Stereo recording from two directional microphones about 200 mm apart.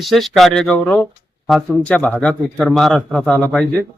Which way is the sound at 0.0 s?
Centre (ahead or behind).